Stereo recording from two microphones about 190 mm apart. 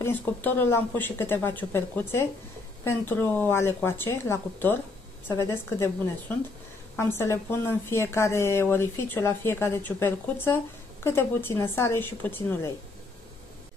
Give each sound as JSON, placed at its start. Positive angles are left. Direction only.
{"t": 0.0, "sound": "speech", "side_deg": 10}